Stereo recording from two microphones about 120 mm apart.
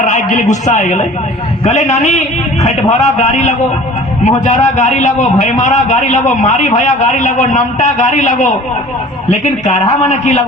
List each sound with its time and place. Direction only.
0.0 s a sound: 90° left
0.6 s a man's voice: 90° left
1.6 s a man's voice: 75° left (ahead or behind)
4.2 s a man's voice: 85° left